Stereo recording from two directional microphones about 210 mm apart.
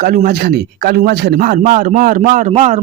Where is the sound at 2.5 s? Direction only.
30° right (ahead or behind).